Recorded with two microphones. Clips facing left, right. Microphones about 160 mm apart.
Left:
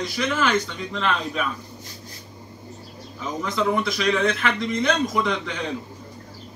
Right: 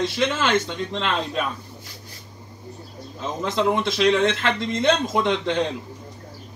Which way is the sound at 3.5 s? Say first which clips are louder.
Right 2 dB; 25° right (ahead or behind).